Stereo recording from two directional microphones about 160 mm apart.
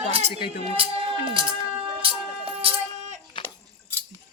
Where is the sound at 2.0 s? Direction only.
35° right (ahead or behind).